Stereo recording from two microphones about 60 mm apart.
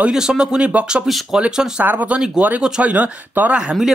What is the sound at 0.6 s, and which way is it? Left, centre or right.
Speech, right.